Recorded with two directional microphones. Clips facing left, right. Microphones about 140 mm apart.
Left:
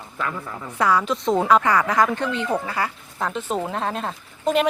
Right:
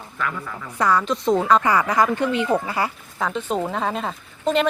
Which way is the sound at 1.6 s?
5° right (ahead or behind).